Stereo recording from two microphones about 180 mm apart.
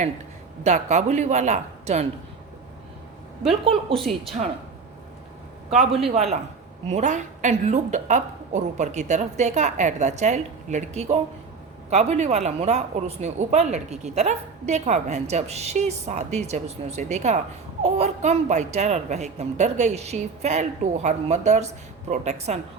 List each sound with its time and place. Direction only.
0.6 s speech: 40° right (ahead or behind)
3.6 s a woman's voice: 30° right (ahead or behind)
3.9 s a woman's voice: centre (ahead or behind)
6.8 s speech: 40° right (ahead or behind)